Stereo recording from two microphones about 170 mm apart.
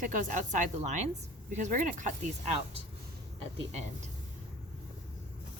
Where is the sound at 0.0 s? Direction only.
50° right (ahead or behind).